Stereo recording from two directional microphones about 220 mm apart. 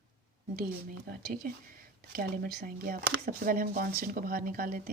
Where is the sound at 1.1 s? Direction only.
45° right (ahead or behind).